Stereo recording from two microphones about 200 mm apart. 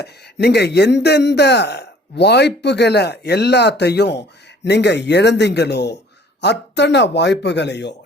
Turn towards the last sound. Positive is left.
turn(degrees=60)  # may be behind; listen again after turning